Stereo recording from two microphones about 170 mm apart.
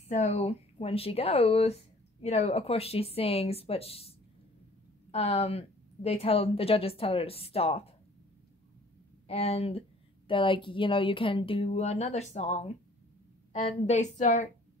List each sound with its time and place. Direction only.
0.1 s speech: 40° left (ahead or behind)
5.1 s speech: 35° left (ahead or behind)
9.3 s a woman's voice: 35° left (ahead or behind)